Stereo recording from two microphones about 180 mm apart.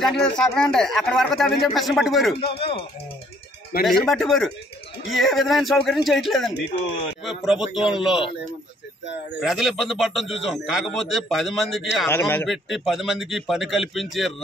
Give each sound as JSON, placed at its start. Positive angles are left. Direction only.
{"t": 0.0, "sound": "speech", "side_deg": 5}
{"t": 2.3, "sound": "speech", "side_deg": 30}
{"t": 3.8, "sound": "speech", "side_deg": 0}
{"t": 6.5, "sound": "speech", "side_deg": 65}
{"t": 7.2, "sound": "speech", "side_deg": 0}
{"t": 9.4, "sound": "speech", "side_deg": 0}
{"t": 12.1, "sound": "a man's voice", "side_deg": 10}
{"t": 12.4, "sound": "speech", "side_deg": 0}